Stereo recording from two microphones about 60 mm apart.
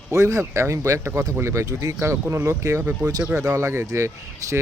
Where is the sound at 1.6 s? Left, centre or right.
Right.